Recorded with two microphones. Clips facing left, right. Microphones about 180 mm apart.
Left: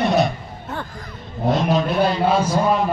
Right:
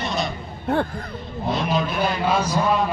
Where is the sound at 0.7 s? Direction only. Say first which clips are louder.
Right 9 dB; 55° right (ahead or behind).